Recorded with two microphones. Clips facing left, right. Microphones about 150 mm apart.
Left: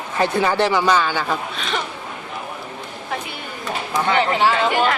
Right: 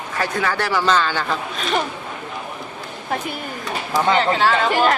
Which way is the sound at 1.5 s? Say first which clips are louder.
Right 3 dB; 45° right (ahead or behind).